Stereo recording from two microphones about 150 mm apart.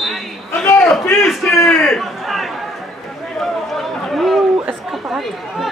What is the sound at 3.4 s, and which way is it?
Chatter, centre (ahead or behind).